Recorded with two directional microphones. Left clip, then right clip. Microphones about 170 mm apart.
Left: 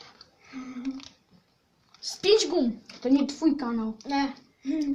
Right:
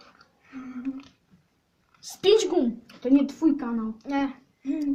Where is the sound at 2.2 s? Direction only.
10° right (ahead or behind).